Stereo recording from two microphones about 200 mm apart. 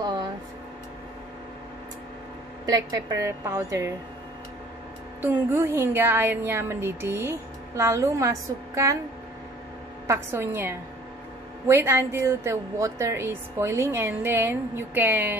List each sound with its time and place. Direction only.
0.0 s a sound: 20° right (ahead or behind)
2.6 s speech: 20° right (ahead or behind)
5.2 s speech: 10° right (ahead or behind)
10.0 s speech: 10° right (ahead or behind)